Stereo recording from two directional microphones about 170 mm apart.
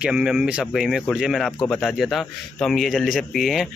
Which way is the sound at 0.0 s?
5° right (ahead or behind).